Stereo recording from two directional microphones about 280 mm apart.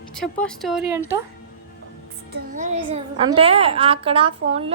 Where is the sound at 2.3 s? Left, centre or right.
Right.